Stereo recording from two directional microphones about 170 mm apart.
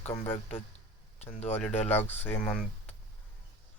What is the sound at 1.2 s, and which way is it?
Speech, 40° left (ahead or behind).